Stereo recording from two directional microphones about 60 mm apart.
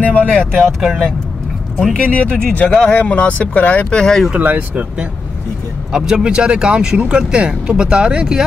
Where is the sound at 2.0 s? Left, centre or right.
Left.